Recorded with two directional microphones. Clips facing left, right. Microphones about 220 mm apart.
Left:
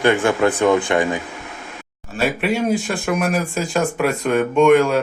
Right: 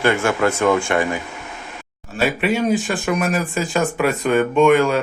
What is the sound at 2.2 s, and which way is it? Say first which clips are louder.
Speech: right 1 dB; centre (ahead or behind).